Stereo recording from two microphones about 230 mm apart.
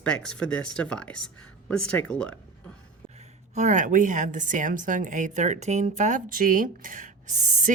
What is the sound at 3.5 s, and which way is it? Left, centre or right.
A woman's voice, right.